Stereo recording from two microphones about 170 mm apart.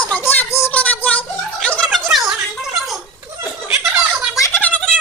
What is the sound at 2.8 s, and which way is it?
Laughter, centre (ahead or behind).